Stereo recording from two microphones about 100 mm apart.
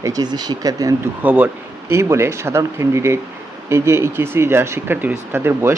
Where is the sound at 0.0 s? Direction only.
40° right (ahead or behind).